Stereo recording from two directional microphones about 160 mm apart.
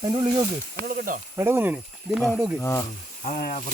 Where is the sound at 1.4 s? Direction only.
15° right (ahead or behind).